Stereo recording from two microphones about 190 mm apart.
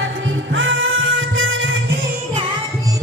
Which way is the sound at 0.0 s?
80° right.